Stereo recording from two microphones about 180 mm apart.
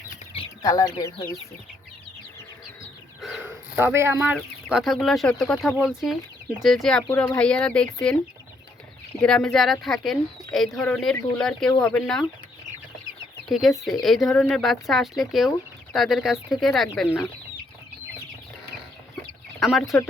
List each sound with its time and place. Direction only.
0.6 s speech: 20° left (ahead or behind)
3.2 s a sound: centre (ahead or behind)
3.8 s speech: 15° right (ahead or behind)
4.4 s speech: centre (ahead or behind)
9.2 s speech: 5° left (ahead or behind)
13.5 s speech: centre (ahead or behind)
19.5 s speech: centre (ahead or behind)